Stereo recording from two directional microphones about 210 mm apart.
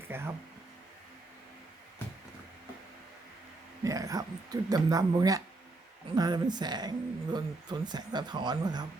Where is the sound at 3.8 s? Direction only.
15° right (ahead or behind).